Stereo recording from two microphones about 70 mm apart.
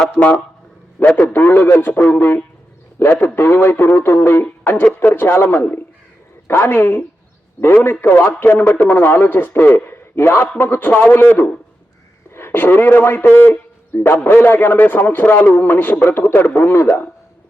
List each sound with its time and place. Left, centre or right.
0.2 s a man's voice: left